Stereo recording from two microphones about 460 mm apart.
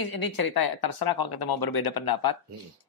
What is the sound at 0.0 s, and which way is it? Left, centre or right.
Speech, left.